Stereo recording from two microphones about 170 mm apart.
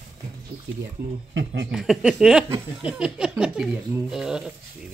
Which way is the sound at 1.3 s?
90° right.